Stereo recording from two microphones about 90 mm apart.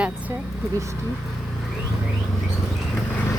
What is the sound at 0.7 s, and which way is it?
Speech, 35° right (ahead or behind).